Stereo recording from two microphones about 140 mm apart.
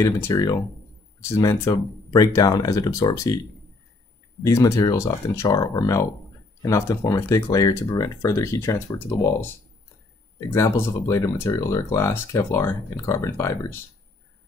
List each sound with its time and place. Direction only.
0.3 s speech: 30° left (ahead or behind)
4.4 s speech: 20° left (ahead or behind)
10.5 s speech: 20° left (ahead or behind)